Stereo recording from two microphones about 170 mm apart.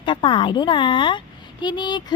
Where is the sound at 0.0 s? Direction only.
30° left (ahead or behind).